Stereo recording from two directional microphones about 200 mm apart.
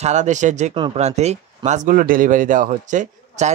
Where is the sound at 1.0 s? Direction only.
35° right (ahead or behind).